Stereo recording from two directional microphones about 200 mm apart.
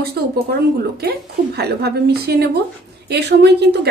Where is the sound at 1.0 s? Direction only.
55° right (ahead or behind).